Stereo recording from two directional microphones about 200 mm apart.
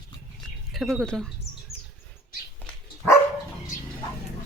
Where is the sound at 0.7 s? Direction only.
Centre (ahead or behind).